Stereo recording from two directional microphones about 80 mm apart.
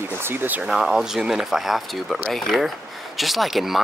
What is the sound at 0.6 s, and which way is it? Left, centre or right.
Speech, centre.